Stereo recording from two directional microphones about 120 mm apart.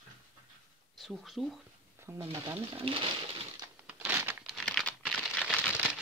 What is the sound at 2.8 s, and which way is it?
Pigeon, 50° right (ahead or behind).